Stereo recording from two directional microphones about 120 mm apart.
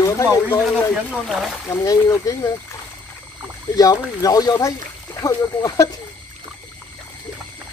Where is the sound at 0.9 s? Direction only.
5° right (ahead or behind).